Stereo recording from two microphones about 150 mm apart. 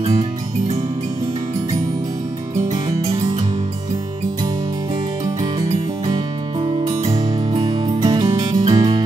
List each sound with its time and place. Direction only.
0.0 s music: 45° right (ahead or behind)
2.7 s music: 25° right (ahead or behind)
6.0 s music: 30° right (ahead or behind)